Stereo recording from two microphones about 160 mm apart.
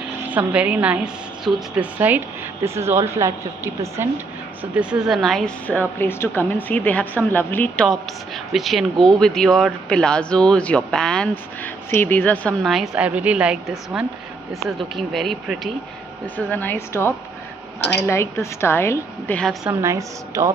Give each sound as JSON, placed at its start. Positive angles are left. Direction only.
{"t": 0.3, "sound": "a woman's voice", "side_deg": -10}
{"t": 4.7, "sound": "a woman's voice", "side_deg": -5}
{"t": 12.6, "sound": "a woman's voice", "side_deg": 0}
{"t": 16.3, "sound": "a woman's voice", "side_deg": 10}
{"t": 19.7, "sound": "a woman's voice", "side_deg": -20}